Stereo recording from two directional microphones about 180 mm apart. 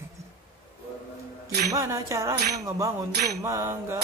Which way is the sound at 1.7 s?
20° right (ahead or behind).